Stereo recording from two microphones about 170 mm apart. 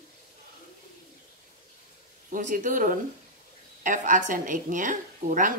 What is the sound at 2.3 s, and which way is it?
A woman's voice, 50° right (ahead or behind).